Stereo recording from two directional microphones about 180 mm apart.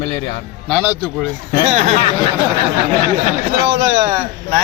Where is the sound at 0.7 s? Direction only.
10° right (ahead or behind).